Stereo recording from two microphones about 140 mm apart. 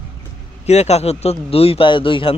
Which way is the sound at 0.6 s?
50° left (ahead or behind).